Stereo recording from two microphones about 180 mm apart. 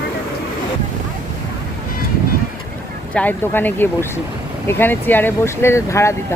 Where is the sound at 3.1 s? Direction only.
10° left (ahead or behind).